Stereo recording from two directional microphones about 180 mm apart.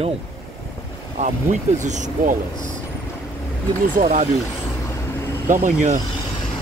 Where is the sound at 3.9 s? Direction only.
50° right (ahead or behind).